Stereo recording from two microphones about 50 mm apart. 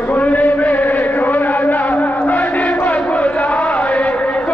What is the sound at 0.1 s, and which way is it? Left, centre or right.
Chant, left.